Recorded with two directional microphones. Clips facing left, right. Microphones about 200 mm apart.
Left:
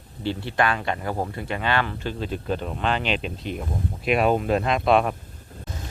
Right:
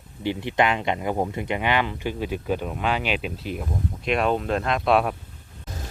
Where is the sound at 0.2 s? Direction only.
15° right (ahead or behind); by 5.1 s centre (ahead or behind).